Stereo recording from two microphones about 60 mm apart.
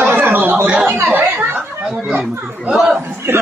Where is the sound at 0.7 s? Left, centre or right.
Centre.